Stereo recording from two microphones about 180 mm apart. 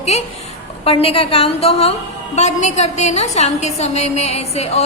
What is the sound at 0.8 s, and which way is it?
A woman's voice, 30° left (ahead or behind).